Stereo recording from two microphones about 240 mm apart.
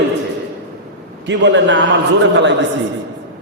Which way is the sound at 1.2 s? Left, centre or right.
Right.